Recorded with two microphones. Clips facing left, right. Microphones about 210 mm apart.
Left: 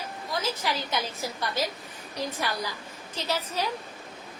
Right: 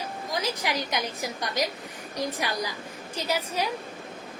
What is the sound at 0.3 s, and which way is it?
Speech, 15° right (ahead or behind).